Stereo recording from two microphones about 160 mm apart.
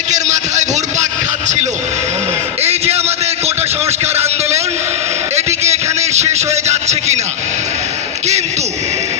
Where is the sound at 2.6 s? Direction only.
40° right (ahead or behind).